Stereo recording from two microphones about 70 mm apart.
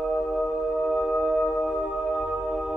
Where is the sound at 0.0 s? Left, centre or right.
Centre.